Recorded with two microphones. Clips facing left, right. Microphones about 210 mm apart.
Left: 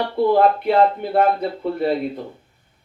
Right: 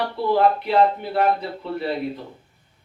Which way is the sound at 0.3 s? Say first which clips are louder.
Left 2 dB; 50° left (ahead or behind).